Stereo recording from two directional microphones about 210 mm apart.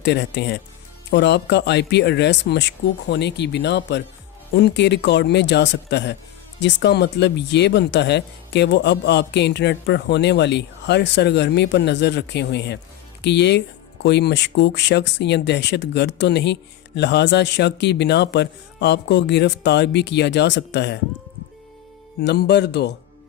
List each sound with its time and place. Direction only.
0.0 s speech: 55° left (ahead or behind)
22.2 s speech: 55° left (ahead or behind)